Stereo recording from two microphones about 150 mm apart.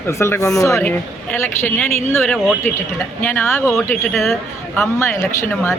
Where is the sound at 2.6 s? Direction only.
15° left (ahead or behind).